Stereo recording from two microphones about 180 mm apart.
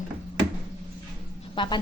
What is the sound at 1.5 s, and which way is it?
Speech, 25° left (ahead or behind).